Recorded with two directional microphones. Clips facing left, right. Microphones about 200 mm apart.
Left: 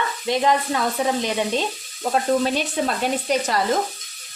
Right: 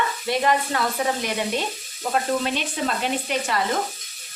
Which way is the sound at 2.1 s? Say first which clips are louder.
Left 4 dB; 40° left (ahead or behind).